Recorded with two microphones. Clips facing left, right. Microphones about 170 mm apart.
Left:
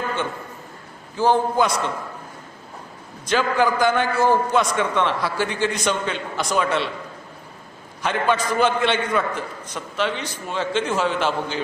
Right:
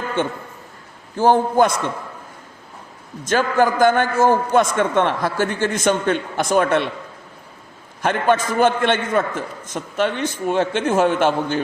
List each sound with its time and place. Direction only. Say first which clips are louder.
1.1 s a man's voice: right 3 dB; 50° right (ahead or behind)
3.2 s a man's voice: right 2 dB; 50° right (ahead or behind)
8.0 s a man's voice: right 3 dB; 50° right (ahead or behind)